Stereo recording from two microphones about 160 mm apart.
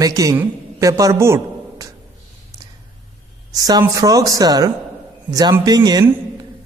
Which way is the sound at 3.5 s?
25° right (ahead or behind).